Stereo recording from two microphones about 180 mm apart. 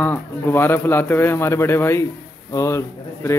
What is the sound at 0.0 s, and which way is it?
A man's voice, 10° left (ahead or behind).